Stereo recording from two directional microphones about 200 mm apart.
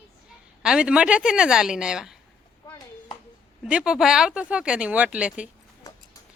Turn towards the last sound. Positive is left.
turn(degrees=-5)  # may be behind; listen again after turning